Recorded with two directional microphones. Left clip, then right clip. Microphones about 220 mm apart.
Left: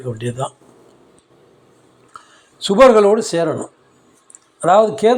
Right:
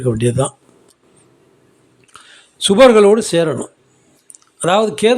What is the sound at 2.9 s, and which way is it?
Speech, 45° right (ahead or behind).